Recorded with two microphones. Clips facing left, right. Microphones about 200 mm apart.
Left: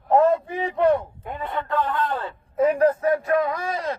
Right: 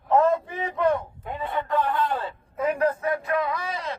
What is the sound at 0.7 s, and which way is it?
Speech, 45° left (ahead or behind).